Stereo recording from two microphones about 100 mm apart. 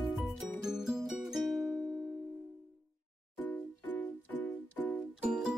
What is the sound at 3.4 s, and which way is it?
Music, 15° left (ahead or behind).